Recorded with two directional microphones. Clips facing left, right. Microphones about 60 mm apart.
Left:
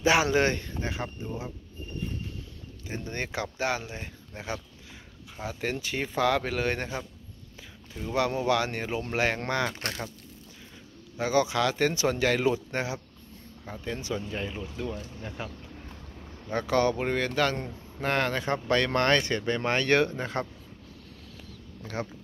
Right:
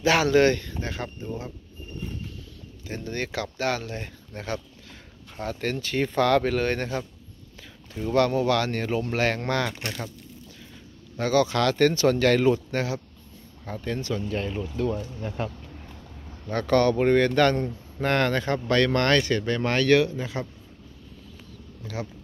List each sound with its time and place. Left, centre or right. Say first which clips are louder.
0.0 s speech: right 4 dB; centre
2.9 s speech: right 3 dB; left
8.1 s speech: right 4 dB; centre
11.1 s speech: right 3 dB; centre
13.7 s speech: right 4 dB; centre
14.5 s speech: right 7 dB; centre
16.4 s speech: right 4 dB; centre
18.5 s speech: right 1 dB; centre
19.9 s speech: right 5 dB; left